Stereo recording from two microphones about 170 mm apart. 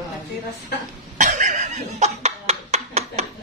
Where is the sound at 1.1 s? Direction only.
45° right (ahead or behind).